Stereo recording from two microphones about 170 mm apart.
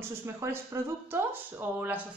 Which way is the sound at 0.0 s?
15° right (ahead or behind).